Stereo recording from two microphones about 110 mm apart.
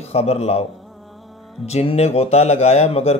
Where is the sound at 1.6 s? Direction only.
70° left (ahead or behind).